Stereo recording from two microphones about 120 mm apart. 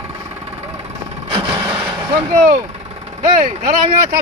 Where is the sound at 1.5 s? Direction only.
20° right (ahead or behind).